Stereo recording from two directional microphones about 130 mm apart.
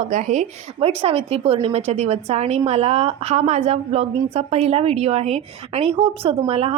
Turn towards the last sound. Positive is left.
turn(degrees=-50)  # may be behind; listen again after turning